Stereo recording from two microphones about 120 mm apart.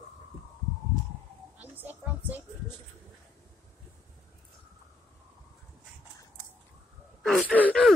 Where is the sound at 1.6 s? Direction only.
15° right (ahead or behind).